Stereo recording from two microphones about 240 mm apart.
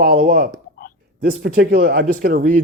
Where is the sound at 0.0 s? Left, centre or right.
Right.